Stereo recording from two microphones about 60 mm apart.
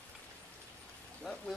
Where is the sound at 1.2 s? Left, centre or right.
Centre.